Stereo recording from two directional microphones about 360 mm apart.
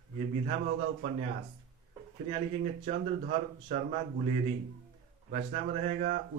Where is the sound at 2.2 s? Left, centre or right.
Centre.